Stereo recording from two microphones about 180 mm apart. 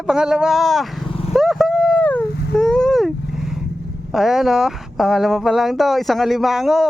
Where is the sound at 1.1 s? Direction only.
30° left (ahead or behind).